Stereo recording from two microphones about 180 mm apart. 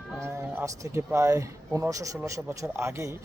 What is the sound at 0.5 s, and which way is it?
Speech, 15° right (ahead or behind).